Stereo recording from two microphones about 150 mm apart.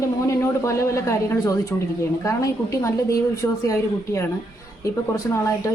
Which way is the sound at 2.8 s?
20° left (ahead or behind).